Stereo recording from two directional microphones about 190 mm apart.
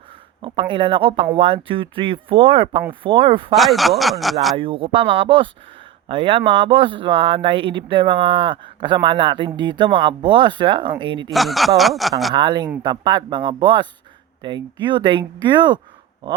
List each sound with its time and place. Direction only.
0.4 s speech: 25° right (ahead or behind)
3.5 s speech: centre (ahead or behind)
4.5 s speech: 30° right (ahead or behind)
11.3 s speech: centre (ahead or behind)
12.3 s speech: 25° right (ahead or behind)